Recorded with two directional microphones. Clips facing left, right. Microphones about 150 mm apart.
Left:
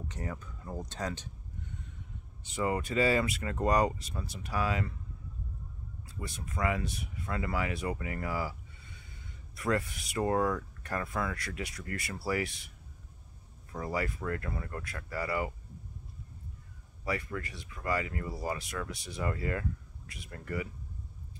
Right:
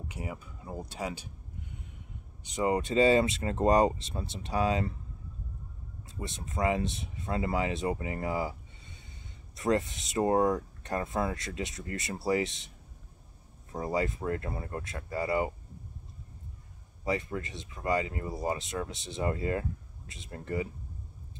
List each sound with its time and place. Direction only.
0.1 s speech: 10° right (ahead or behind)
2.5 s speech: 20° right (ahead or behind)
6.0 s speech: 25° right (ahead or behind)
17.0 s speech: 25° right (ahead or behind)